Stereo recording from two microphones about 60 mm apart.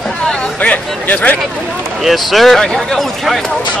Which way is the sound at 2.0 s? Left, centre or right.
Centre.